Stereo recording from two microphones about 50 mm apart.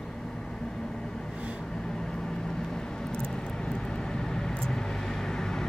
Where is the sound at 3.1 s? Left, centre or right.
Centre.